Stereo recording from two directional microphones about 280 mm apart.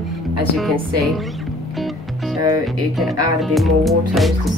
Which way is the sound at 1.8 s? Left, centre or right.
Centre.